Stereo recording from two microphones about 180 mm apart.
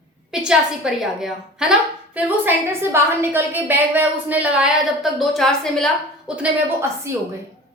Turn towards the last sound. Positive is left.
turn(degrees=-15)  # may be behind; listen again after turning